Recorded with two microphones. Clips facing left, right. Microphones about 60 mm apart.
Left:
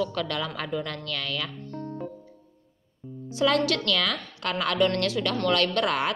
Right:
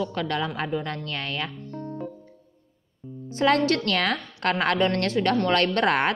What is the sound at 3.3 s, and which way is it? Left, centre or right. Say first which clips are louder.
A woman's voice: right 2 dB; right.